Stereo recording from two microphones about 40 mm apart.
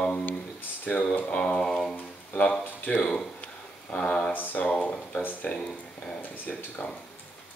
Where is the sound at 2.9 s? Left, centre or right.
Centre.